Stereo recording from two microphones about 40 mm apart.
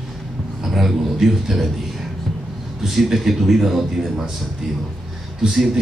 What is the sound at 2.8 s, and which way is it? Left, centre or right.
A man's voice, centre.